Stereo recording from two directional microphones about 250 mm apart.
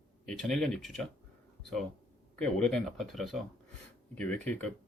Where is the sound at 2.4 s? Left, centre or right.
Centre.